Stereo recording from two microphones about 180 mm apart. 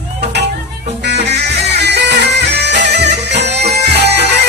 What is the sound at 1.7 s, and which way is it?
Music, 70° right (ahead or behind).